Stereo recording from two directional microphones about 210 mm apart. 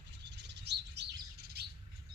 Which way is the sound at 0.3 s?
55° right (ahead or behind).